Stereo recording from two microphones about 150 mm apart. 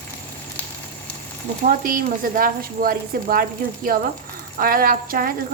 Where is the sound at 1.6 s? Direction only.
65° right (ahead or behind).